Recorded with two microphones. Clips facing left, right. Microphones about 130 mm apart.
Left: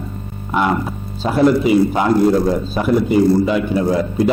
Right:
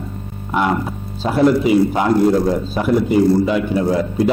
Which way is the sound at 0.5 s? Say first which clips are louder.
Left 1 dB; 20° left (ahead or behind).